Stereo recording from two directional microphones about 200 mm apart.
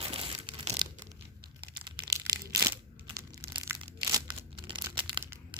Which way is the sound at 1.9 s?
25° right (ahead or behind).